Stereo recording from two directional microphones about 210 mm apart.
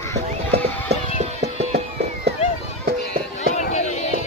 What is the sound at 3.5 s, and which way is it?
Run, 35° left (ahead or behind).